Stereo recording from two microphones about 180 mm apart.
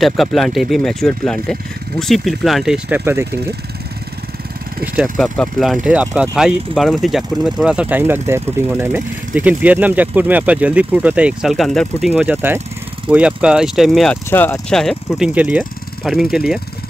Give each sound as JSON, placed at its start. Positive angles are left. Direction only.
{"t": 0.0, "sound": "speech", "side_deg": 0}
{"t": 5.1, "sound": "speech", "side_deg": 5}
{"t": 14.3, "sound": "speech", "side_deg": 10}